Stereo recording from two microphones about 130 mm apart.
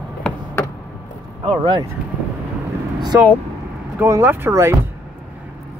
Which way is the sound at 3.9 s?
20° right (ahead or behind).